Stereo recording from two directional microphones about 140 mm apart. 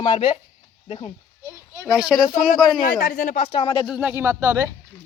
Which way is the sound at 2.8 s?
70° left (ahead or behind).